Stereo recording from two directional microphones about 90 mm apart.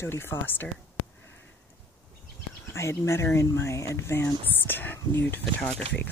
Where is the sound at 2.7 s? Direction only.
30° left (ahead or behind).